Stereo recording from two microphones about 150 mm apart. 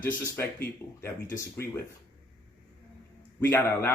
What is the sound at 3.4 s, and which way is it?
Speech, 15° left (ahead or behind).